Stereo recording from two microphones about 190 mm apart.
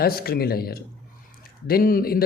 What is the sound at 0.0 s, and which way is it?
Speech, 55° left (ahead or behind).